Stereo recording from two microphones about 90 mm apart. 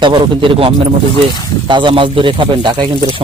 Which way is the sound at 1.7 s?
65° right (ahead or behind).